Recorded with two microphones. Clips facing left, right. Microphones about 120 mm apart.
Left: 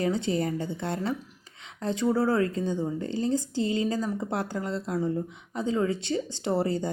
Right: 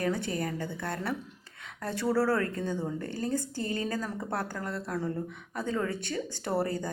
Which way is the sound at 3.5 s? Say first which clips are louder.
Left 6 dB; 50° right (ahead or behind).